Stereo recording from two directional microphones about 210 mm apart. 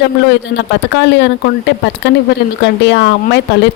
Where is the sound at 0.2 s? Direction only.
55° left (ahead or behind).